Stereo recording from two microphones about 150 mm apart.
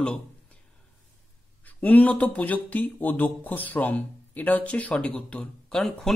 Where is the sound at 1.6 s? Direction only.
10° left (ahead or behind).